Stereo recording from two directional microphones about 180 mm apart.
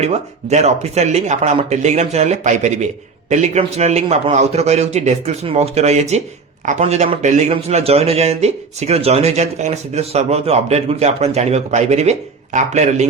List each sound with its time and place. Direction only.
0.0 s speech: 35° right (ahead or behind)